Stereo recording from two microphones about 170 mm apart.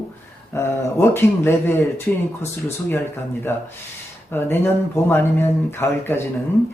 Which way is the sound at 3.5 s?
15° left (ahead or behind).